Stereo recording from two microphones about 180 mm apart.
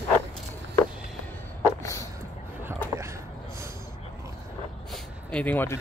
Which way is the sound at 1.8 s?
15° left (ahead or behind).